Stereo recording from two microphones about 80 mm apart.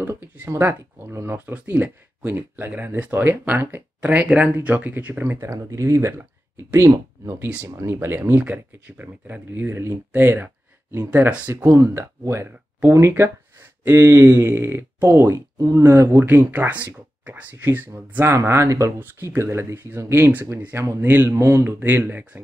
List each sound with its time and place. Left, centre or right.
0.0 s speech: right
5.2 s speech: right
11.5 s speech: right
18.3 s speech: right
18.9 s speech: right
21.6 s speech: right